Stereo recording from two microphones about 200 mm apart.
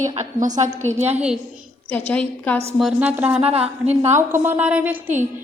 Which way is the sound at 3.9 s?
35° right (ahead or behind).